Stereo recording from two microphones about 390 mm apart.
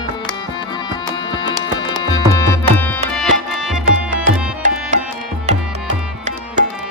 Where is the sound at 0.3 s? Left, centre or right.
Centre.